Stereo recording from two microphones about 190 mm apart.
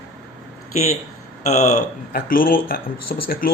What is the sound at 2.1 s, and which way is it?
Speech, 50° left (ahead or behind).